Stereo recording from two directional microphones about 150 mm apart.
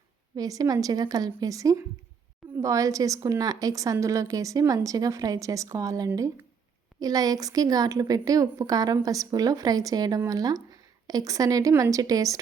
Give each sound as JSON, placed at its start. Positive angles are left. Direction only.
{"t": 0.3, "sound": "a woman's voice", "side_deg": -25}